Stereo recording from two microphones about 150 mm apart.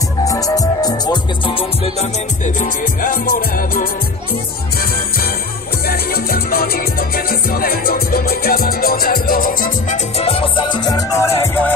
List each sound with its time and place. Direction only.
0.2 s music: 25° left (ahead or behind)
2.0 s music: 55° left (ahead or behind); by 3.9 s 80° left
5.9 s music: 90° left; by 9.9 s 70° left (ahead or behind)
10.1 s music: 40° left (ahead or behind); by 11.7 s 15° left (ahead or behind)